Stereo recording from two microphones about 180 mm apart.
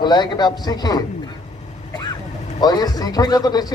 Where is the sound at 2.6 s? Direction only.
20° left (ahead or behind).